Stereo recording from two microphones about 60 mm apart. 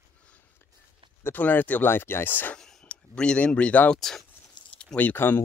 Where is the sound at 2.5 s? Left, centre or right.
Centre.